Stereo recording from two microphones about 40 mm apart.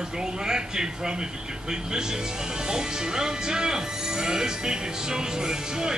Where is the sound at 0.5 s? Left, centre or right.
Centre.